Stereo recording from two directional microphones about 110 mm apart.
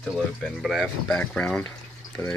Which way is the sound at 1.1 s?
10° left (ahead or behind).